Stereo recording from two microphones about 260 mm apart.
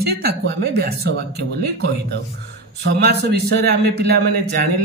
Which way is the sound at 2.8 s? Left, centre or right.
Right.